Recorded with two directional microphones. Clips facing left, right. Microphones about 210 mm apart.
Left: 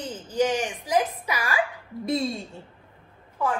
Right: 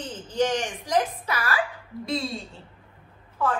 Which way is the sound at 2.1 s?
50° left (ahead or behind).